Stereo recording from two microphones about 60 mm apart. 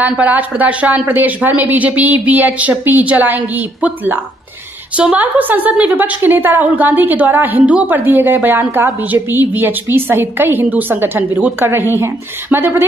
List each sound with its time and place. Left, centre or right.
0.2 s a woman's voice: right